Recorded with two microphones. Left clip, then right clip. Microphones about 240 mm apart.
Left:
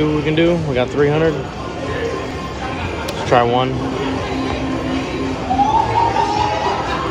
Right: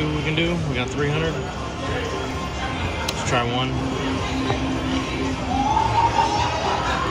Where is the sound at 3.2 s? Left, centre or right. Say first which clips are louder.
Left 10 dB; centre.